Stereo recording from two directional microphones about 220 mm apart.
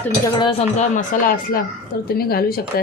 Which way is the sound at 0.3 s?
25° left (ahead or behind).